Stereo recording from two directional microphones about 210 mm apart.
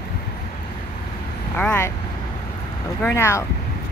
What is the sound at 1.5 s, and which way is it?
Speech, 10° left (ahead or behind).